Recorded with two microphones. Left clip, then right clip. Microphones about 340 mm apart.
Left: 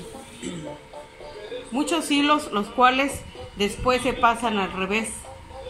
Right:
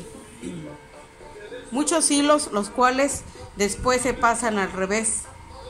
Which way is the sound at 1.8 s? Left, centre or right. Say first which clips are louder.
Right 1 dB; centre.